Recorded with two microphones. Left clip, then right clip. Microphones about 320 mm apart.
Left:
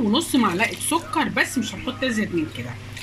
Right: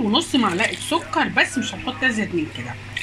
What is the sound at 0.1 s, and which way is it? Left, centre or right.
Speech, centre.